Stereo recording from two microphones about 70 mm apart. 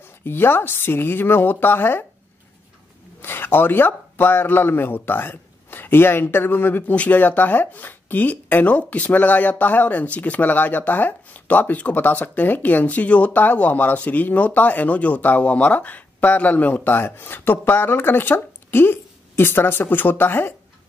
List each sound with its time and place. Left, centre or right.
0.2 s speech: left
3.2 s speech: left